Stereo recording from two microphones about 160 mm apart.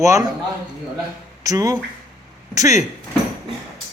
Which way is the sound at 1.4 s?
20° right (ahead or behind).